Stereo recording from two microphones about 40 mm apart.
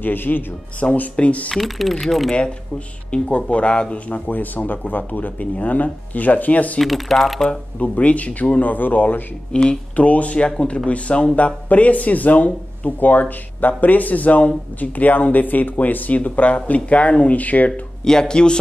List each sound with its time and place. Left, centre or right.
0.0 s speech: left
0.8 s speech: left
1.6 s speech: centre
3.1 s speech: left
4.3 s speech: left
6.8 s speech: centre
7.4 s speech: left
9.5 s speech: left
9.9 s speech: left
16.2 s speech: left
18.3 s speech: left